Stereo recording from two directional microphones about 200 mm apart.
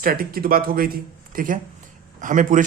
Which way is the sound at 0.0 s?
45° right (ahead or behind).